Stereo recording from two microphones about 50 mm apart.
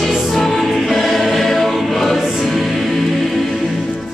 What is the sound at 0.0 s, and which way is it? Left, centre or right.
Choir, centre.